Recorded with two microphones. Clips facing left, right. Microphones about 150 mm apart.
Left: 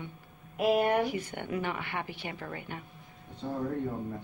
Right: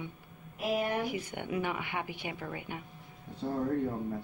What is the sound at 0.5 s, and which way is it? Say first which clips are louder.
Speech: left 6 dB; 60° left (ahead or behind).